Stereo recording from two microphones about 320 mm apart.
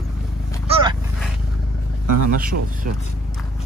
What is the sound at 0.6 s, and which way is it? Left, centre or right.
Dog, centre.